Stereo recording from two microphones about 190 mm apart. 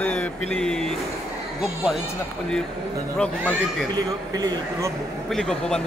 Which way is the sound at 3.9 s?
20° right (ahead or behind).